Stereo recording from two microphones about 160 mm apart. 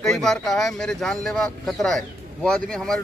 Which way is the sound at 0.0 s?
5° left (ahead or behind).